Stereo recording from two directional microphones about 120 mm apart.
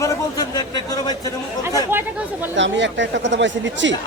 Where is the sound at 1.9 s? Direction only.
15° right (ahead or behind).